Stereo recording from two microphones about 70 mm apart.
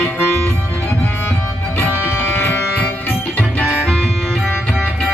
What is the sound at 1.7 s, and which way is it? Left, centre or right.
Music, left.